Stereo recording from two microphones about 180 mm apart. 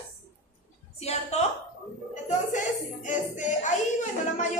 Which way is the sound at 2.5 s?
45° left (ahead or behind).